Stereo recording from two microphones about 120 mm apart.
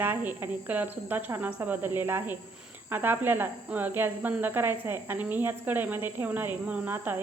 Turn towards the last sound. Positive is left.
turn(degrees=-15)  # may be behind; listen again after turning